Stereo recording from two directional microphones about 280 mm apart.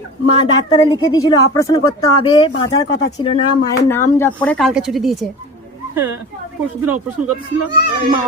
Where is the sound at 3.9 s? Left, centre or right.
Centre.